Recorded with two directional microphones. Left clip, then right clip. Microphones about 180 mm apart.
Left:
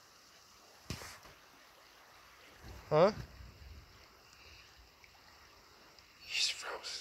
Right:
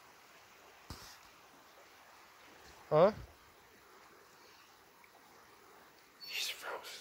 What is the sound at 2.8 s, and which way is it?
Boat, 35° left (ahead or behind).